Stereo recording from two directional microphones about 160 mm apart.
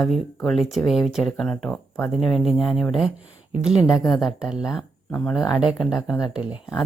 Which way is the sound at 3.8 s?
20° left (ahead or behind).